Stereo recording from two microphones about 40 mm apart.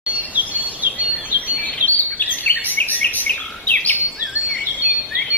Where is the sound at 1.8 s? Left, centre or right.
Left.